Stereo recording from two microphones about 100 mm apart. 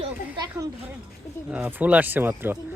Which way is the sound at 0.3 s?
40° right (ahead or behind).